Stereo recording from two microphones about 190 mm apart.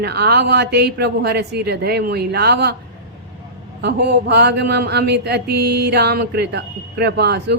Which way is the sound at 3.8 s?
60° right (ahead or behind).